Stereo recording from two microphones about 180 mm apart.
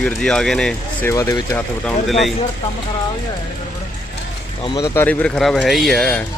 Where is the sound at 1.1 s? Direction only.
15° left (ahead or behind).